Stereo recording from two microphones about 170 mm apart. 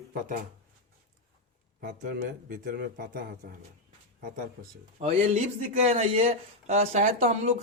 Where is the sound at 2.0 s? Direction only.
55° right (ahead or behind).